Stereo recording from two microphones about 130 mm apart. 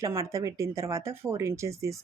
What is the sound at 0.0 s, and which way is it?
Speech, 25° right (ahead or behind).